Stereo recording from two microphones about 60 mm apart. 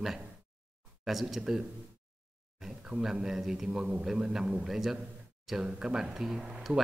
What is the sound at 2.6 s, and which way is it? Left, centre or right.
Speech, centre.